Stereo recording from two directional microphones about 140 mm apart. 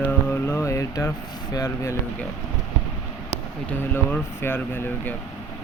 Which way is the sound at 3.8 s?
15° left (ahead or behind).